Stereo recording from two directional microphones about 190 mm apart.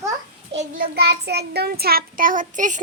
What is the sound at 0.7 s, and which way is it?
Child singing, 55° right (ahead or behind).